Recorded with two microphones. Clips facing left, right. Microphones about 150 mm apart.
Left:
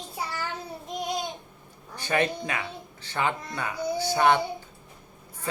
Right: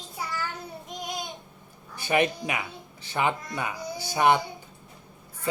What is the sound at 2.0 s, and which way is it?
Speech, 15° right (ahead or behind).